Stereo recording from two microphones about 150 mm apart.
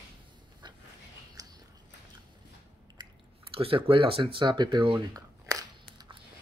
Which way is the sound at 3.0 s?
40° right (ahead or behind).